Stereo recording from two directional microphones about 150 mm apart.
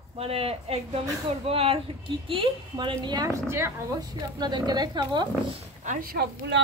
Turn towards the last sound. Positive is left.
turn(degrees=-85)